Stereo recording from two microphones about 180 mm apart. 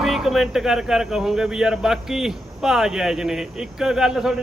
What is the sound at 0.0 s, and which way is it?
Speech, centre (ahead or behind).